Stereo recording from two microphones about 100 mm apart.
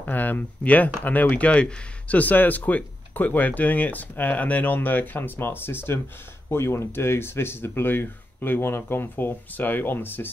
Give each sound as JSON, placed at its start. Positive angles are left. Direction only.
{"t": 0.0, "sound": "speech", "side_deg": 15}